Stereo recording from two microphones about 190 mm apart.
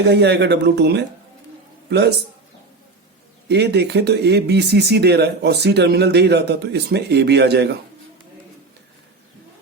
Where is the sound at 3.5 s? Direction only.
60° right (ahead or behind).